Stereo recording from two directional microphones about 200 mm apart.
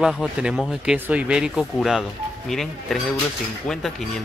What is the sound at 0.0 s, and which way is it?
Speech, centre (ahead or behind).